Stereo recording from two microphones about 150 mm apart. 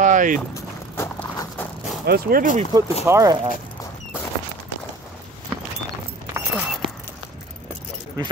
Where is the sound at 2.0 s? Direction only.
85° right.